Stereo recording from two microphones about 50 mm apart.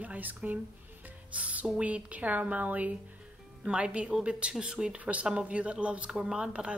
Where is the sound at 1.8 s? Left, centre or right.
Right.